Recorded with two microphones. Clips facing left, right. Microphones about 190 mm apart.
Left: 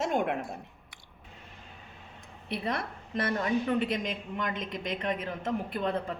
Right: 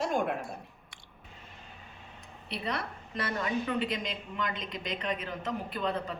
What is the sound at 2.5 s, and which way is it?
A woman's voice, 50° left (ahead or behind).